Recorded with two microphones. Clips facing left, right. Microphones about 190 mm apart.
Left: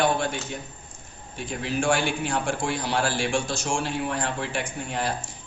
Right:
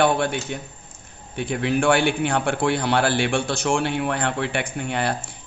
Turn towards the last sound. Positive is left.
turn(degrees=-65)  # may be behind; listen again after turning